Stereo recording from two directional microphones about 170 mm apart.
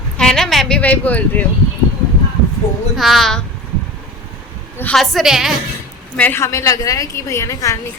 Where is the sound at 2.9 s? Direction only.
Centre (ahead or behind).